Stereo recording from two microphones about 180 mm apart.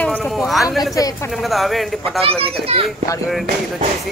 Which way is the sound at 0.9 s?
20° left (ahead or behind).